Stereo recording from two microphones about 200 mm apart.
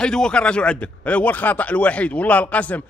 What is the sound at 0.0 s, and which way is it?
A man's voice, 5° left (ahead or behind).